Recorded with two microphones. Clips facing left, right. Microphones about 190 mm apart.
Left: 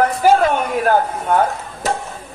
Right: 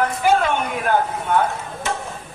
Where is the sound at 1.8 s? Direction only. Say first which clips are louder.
Left 5 dB; 40° left (ahead or behind).